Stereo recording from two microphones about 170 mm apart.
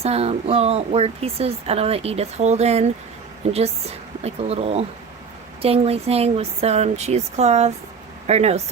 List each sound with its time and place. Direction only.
0.0 s speech: 35° right (ahead or behind)